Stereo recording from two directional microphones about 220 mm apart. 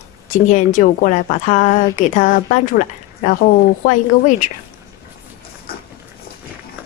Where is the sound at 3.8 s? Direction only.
35° left (ahead or behind).